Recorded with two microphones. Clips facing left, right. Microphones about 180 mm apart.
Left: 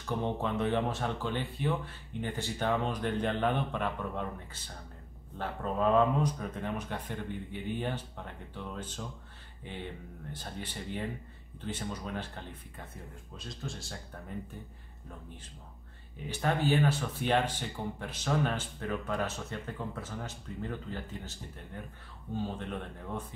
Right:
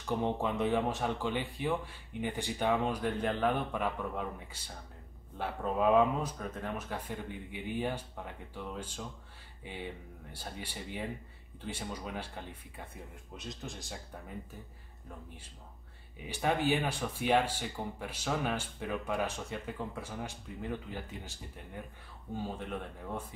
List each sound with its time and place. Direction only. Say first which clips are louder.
0.0 s speech: right 1 dB; 10° right (ahead or behind)
16.3 s speech: left 1 dB; 15° right (ahead or behind)